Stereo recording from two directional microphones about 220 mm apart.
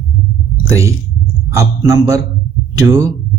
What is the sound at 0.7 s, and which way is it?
A man's voice, 15° right (ahead or behind).